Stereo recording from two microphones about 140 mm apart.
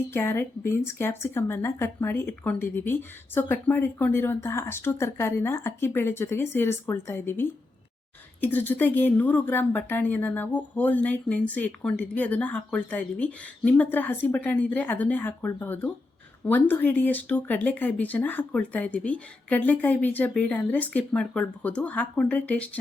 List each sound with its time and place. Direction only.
0.1 s speech: 15° left (ahead or behind)